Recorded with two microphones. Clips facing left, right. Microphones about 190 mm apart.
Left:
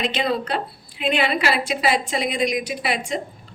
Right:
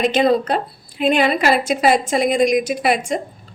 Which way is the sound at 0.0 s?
45° right (ahead or behind).